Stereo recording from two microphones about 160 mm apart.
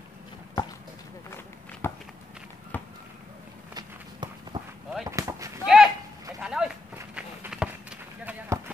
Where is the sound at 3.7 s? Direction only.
30° right (ahead or behind).